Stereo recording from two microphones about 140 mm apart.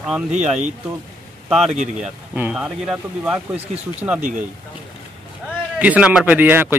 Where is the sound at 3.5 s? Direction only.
50° right (ahead or behind).